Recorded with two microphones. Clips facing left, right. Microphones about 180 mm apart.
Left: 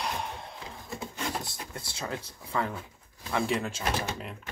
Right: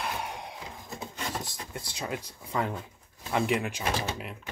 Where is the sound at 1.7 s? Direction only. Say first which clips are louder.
Right 1 dB; 15° right (ahead or behind).